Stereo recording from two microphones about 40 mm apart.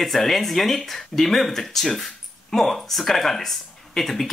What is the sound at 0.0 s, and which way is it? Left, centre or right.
Speech, centre.